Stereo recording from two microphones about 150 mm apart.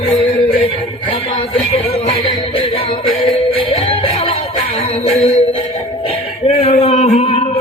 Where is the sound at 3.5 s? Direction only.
35° left (ahead or behind).